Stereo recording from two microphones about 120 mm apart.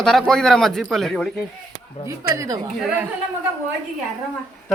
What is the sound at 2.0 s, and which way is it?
Speech, 25° right (ahead or behind).